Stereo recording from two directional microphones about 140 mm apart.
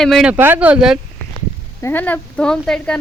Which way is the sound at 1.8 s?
15° left (ahead or behind).